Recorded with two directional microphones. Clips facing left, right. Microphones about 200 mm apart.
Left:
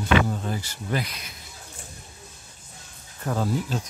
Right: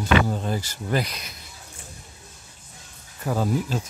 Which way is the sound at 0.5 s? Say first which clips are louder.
Right 3 dB; 40° right (ahead or behind).